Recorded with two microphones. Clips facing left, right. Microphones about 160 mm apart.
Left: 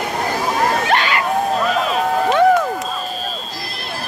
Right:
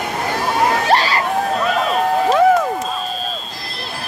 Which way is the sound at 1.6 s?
Centre (ahead or behind).